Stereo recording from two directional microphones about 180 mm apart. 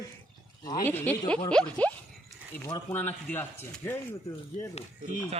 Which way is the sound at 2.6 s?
20° left (ahead or behind).